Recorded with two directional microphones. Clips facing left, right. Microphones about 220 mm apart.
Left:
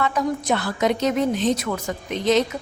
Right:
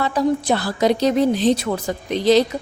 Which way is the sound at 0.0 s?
35° right (ahead or behind).